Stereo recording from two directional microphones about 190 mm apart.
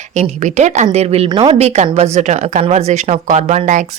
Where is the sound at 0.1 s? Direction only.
40° right (ahead or behind).